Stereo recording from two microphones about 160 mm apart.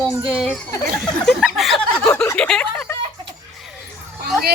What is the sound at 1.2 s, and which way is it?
Speech, centre (ahead or behind).